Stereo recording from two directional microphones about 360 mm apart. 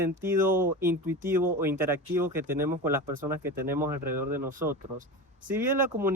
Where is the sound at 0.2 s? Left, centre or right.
Centre.